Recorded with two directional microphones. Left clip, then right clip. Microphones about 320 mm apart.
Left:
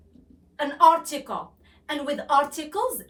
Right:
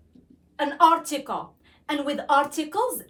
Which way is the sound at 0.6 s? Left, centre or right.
Centre.